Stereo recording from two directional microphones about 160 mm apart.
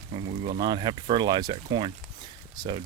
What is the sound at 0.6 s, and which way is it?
Speech, 30° right (ahead or behind).